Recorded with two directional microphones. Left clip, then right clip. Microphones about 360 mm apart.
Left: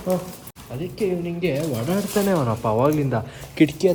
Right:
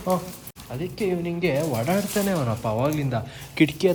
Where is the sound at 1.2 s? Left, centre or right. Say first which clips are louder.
Even; right.